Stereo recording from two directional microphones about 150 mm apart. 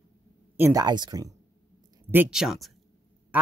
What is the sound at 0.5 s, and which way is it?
Speech, 15° right (ahead or behind).